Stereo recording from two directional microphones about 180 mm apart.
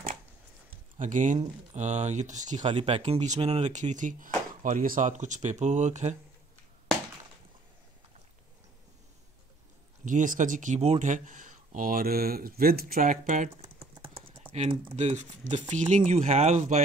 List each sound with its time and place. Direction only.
0.9 s speech: 45° right (ahead or behind)
2.7 s speech: 30° right (ahead or behind)
10.0 s speech: 45° right (ahead or behind)
13.7 s typing: 30° right (ahead or behind)
14.5 s speech: 35° right (ahead or behind)